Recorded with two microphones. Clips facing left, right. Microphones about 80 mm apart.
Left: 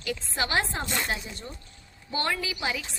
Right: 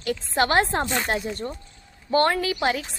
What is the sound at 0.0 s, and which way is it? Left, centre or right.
Speech, right.